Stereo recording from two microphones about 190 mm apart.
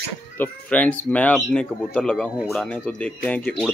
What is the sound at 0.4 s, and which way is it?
Speech, 10° left (ahead or behind).